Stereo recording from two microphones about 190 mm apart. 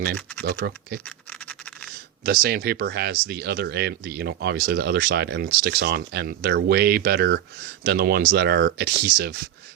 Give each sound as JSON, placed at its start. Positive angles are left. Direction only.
{"t": 0.4, "sound": "speech", "side_deg": -55}
{"t": 1.0, "sound": "scratch", "side_deg": 5}
{"t": 2.2, "sound": "speech", "side_deg": -55}